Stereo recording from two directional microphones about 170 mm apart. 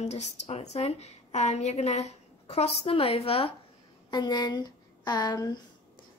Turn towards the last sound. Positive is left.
turn(degrees=25)  # may be behind; listen again after turning